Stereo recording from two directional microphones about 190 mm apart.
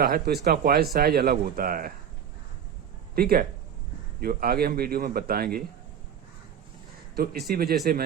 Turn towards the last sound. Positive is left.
turn(degrees=-55)  # may be behind; listen again after turning